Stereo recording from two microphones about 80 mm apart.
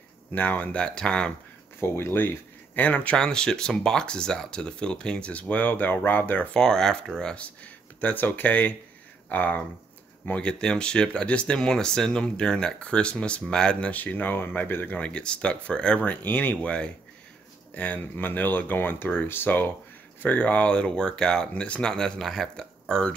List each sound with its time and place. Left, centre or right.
0.3 s speech: centre
1.8 s speech: left
3.2 s speech: centre
6.5 s speech: centre